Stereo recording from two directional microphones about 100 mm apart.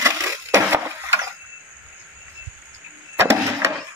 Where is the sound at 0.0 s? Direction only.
30° right (ahead or behind).